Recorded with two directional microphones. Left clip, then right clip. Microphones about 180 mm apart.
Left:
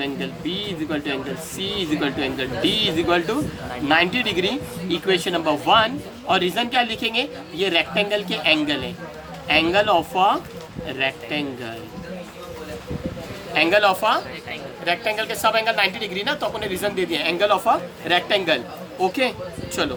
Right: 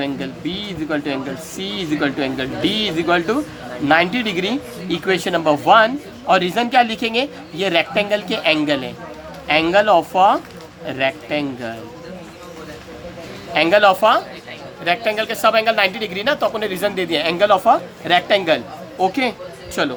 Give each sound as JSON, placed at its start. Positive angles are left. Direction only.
{"t": 0.0, "sound": "speech", "side_deg": -45}
{"t": 13.5, "sound": "speech", "side_deg": -45}